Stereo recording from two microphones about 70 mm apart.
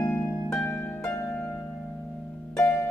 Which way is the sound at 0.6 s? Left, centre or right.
Left.